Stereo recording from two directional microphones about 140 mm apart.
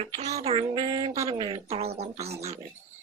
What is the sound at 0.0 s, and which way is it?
Speech, 50° right (ahead or behind).